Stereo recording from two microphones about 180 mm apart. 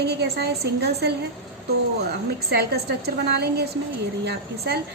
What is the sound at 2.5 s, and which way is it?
A woman's voice, 60° right (ahead or behind).